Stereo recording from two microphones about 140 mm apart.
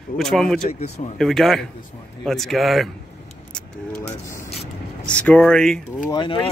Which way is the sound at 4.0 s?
20° left (ahead or behind).